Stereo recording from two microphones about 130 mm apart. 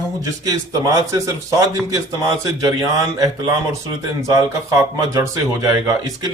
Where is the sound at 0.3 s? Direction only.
25° right (ahead or behind).